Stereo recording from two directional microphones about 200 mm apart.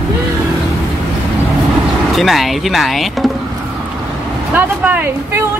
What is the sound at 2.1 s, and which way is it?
Speech, centre (ahead or behind).